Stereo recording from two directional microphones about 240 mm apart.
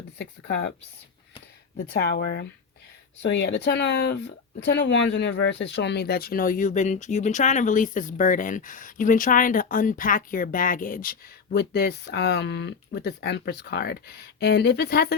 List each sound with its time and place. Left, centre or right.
0.2 s speech: left
1.9 s speech: left